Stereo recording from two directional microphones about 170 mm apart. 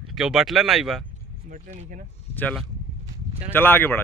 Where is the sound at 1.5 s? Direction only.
50° right (ahead or behind).